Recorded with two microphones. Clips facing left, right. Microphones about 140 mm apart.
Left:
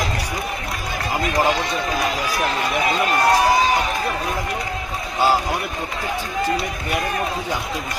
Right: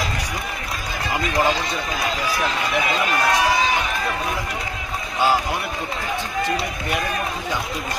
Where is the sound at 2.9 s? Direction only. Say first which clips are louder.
Left 5 dB; 40° left (ahead or behind).